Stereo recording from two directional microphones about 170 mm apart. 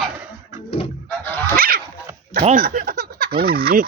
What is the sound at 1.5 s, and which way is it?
Dog, 60° right (ahead or behind).